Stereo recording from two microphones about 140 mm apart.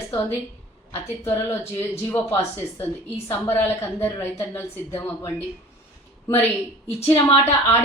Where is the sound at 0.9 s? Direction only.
15° left (ahead or behind).